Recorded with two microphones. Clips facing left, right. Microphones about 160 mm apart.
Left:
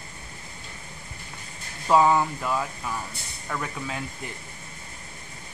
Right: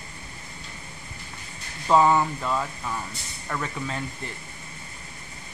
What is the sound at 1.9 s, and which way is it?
Speech, 5° left (ahead or behind).